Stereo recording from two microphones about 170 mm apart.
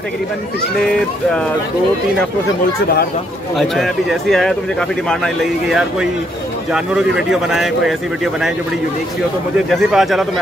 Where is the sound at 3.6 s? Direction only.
Centre (ahead or behind).